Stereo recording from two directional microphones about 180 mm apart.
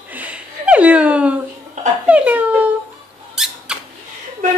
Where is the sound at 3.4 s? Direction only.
5° right (ahead or behind).